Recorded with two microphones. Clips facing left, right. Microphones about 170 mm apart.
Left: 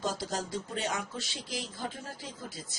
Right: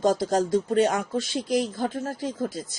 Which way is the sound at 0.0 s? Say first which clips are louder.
Right 12 dB; 50° right (ahead or behind).